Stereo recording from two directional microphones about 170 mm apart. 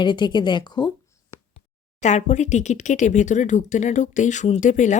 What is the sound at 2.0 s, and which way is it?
Speech, 45° left (ahead or behind).